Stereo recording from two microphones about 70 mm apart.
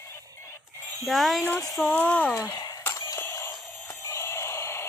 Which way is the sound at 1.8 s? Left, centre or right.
Centre.